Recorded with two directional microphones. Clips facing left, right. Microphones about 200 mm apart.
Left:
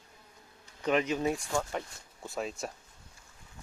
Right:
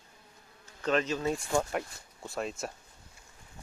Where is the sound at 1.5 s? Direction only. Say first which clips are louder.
Right 3 dB; 10° right (ahead or behind).